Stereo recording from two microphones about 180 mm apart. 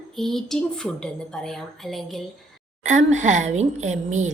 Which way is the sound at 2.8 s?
40° right (ahead or behind).